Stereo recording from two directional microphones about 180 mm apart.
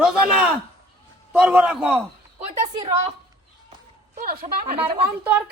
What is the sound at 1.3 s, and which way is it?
Speech, 5° right (ahead or behind).